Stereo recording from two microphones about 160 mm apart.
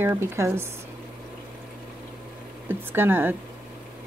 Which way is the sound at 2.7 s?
15° right (ahead or behind).